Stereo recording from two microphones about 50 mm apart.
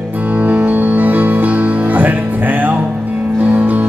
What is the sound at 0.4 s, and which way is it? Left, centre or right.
Music, right.